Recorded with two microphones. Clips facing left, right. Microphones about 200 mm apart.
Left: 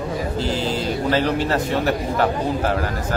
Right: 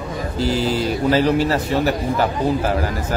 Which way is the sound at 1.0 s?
5° right (ahead or behind).